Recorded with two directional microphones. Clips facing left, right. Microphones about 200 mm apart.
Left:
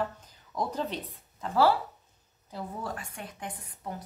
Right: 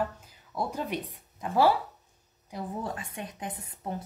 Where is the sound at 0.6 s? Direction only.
10° right (ahead or behind).